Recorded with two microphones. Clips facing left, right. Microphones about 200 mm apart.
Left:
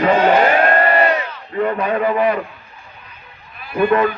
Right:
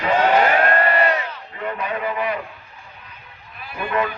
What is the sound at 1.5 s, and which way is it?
Speech, 50° left (ahead or behind).